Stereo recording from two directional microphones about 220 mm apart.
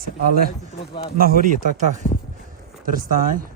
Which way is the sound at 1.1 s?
40° right (ahead or behind).